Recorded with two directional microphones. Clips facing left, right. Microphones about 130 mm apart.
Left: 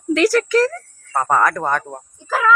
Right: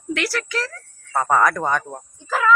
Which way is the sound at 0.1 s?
40° left (ahead or behind).